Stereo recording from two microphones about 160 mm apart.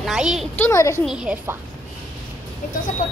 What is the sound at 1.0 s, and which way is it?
Speech, 5° right (ahead or behind).